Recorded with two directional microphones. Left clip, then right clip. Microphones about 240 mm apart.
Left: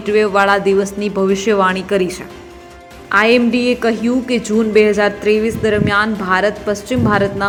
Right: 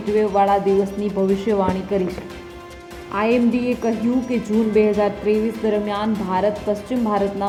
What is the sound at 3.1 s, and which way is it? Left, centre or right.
Speech, centre.